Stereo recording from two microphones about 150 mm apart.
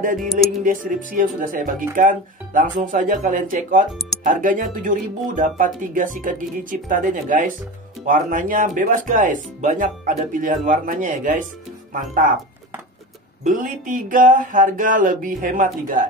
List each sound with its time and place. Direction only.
0.7 s speech: 65° right (ahead or behind)
13.4 s speech: 65° right (ahead or behind)